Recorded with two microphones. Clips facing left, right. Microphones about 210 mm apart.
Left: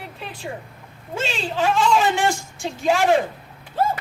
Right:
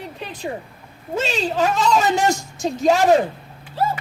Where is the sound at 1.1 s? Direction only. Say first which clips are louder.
Right 4 dB; 40° right (ahead or behind).